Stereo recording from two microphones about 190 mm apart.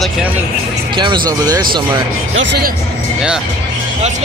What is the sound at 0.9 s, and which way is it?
Speech, 25° right (ahead or behind).